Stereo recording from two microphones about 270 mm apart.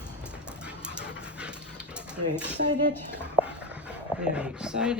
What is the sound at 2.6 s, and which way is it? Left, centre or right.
Speech, right.